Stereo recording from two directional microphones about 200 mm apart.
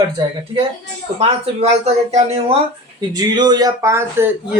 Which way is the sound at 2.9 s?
20° right (ahead or behind).